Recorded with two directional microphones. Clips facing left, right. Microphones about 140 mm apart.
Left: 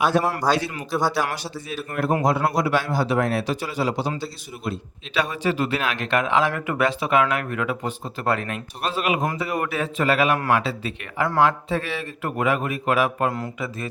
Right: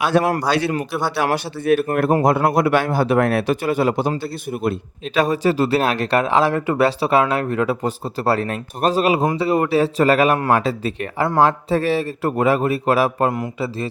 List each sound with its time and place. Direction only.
0.1 s a man's voice: 75° right (ahead or behind)
1.0 s a man's voice: 60° right (ahead or behind)
5.1 s speech: 40° right (ahead or behind)